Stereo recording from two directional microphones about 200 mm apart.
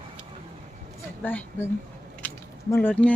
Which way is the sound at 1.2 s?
10° left (ahead or behind).